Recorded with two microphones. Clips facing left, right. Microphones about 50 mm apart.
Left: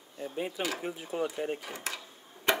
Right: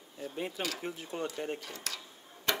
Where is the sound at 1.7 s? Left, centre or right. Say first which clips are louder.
Left 4 dB; left.